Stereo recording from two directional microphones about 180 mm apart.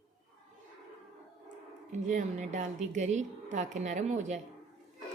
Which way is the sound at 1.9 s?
40° right (ahead or behind).